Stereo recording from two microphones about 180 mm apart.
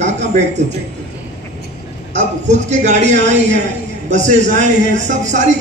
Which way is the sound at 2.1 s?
40° right (ahead or behind).